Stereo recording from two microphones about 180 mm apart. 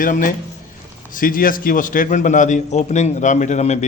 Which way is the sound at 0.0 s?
50° left (ahead or behind).